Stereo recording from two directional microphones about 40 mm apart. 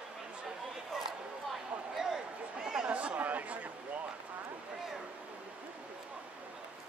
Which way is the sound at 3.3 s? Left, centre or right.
Right.